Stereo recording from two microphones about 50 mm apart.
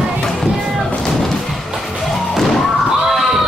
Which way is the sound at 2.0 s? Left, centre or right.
Centre.